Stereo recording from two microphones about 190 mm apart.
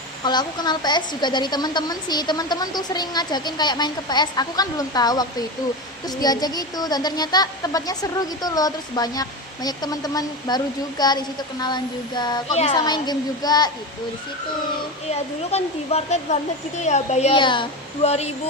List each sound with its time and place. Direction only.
0.3 s a woman's voice: 20° left (ahead or behind)
12.5 s speech: 35° left (ahead or behind)
12.8 s a woman's voice: 20° left (ahead or behind)
15.1 s speech: 35° left (ahead or behind)